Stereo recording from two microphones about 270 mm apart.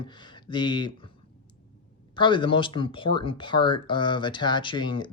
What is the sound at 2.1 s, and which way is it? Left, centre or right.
Speech, centre.